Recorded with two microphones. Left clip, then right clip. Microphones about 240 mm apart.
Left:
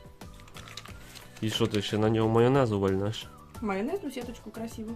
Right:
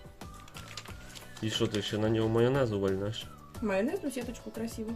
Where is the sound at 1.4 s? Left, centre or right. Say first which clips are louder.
Left 3 dB; left.